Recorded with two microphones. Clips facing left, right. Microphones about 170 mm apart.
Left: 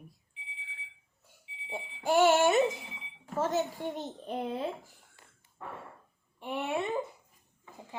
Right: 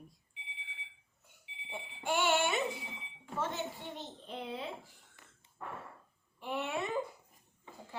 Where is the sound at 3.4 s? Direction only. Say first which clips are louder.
Left 8 dB; 40° left (ahead or behind).